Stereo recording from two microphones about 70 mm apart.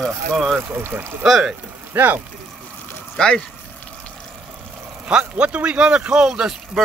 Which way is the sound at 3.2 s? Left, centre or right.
Centre.